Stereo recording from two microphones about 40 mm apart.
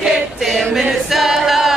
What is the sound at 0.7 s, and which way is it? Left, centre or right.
Choir, centre.